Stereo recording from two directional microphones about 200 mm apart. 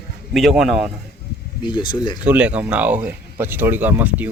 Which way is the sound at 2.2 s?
5° right (ahead or behind).